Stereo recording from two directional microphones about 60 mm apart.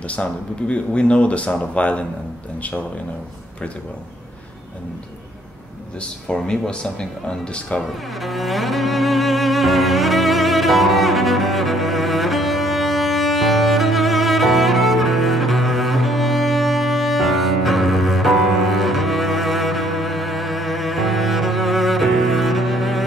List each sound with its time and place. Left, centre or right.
0.1 s speech: centre
5.9 s speech: centre
7.8 s music: centre